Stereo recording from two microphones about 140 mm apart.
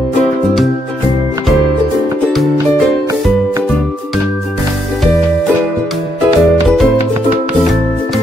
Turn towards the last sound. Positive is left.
turn(degrees=0)  # may be behind; listen again after turning